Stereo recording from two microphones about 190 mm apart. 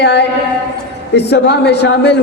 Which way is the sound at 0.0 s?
65° left (ahead or behind).